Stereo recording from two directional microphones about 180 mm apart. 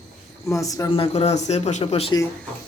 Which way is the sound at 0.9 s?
35° left (ahead or behind).